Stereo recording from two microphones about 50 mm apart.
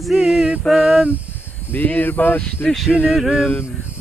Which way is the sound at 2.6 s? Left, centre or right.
Centre.